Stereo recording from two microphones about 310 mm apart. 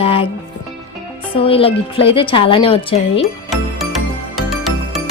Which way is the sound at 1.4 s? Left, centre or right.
Centre.